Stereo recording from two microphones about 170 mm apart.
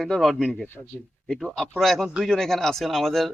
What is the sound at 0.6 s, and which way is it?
Speech, 10° left (ahead or behind).